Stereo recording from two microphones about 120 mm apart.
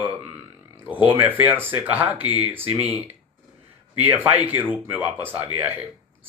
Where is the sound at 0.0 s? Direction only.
15° right (ahead or behind).